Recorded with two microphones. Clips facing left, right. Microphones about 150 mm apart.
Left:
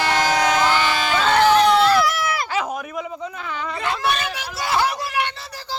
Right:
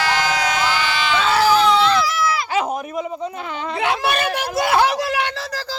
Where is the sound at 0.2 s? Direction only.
45° left (ahead or behind).